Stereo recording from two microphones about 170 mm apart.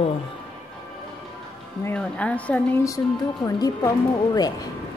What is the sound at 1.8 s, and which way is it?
Speech, 5° left (ahead or behind).